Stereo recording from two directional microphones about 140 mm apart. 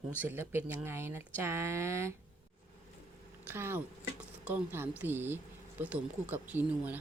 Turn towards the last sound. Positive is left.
turn(degrees=-10)  # may be behind; listen again after turning